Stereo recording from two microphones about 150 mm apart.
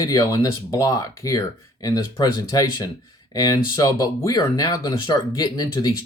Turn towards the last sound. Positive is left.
turn(degrees=25)  # may be behind; listen again after turning